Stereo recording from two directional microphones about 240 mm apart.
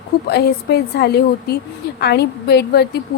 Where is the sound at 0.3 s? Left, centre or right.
Left.